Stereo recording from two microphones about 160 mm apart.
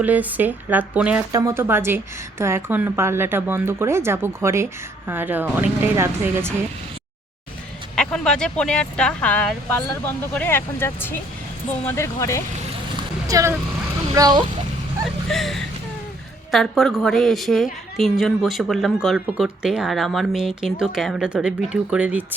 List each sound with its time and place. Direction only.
0.0 s speech: 10° right (ahead or behind)
1.3 s speech: 20° right (ahead or behind)
7.9 s a woman's voice: 5° left (ahead or behind)
13.2 s speech: 20° right (ahead or behind)
15.3 s a woman's voice: centre (ahead or behind)